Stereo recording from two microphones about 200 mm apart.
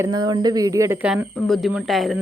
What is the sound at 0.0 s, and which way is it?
A woman's voice, 20° right (ahead or behind).